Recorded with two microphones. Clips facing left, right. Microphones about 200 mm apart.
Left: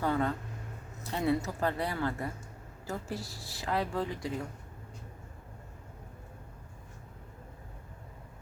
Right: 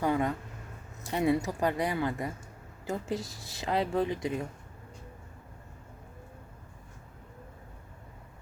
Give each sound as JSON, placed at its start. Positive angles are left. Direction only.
{"t": 0.0, "sound": "speech", "side_deg": -15}